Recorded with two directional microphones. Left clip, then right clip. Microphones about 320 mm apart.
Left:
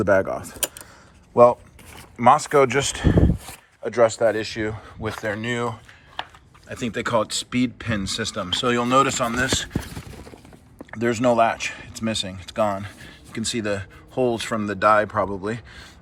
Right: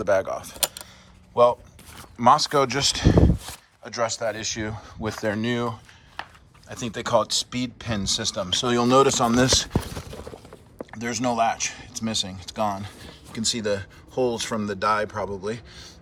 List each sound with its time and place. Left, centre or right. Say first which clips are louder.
0.0 s speech: left 3 dB; centre
2.1 s speech: left 2 dB; centre
10.9 s speech: left 6 dB; centre